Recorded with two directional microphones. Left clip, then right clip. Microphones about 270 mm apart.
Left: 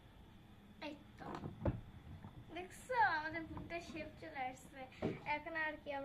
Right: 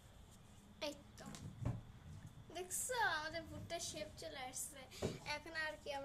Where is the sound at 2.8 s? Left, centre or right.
Right.